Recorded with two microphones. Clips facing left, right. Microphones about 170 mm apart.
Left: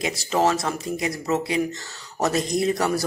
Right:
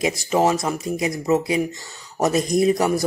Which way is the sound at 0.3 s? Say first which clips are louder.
Right 1 dB; 15° right (ahead or behind).